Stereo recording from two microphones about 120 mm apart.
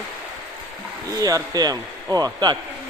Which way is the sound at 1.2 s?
30° right (ahead or behind).